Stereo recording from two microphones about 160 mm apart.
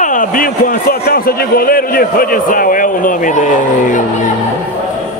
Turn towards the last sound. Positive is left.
turn(degrees=50)  # may be behind; listen again after turning